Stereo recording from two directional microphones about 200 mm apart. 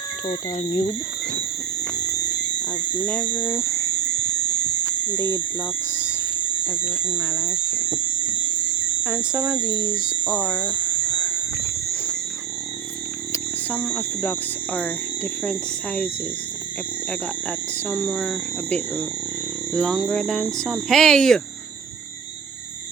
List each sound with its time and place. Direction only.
0.3 s speech: 30° left (ahead or behind)
3.0 s speech: 10° left (ahead or behind)
7.1 s speech: 10° left (ahead or behind)
9.0 s speech: 5° right (ahead or behind)
10.6 s a sound: 20° left (ahead or behind)
13.3 s speech: 5° left (ahead or behind)
17.8 s speech: centre (ahead or behind)